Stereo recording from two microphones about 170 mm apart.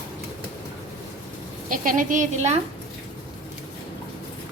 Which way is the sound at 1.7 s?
50° right (ahead or behind).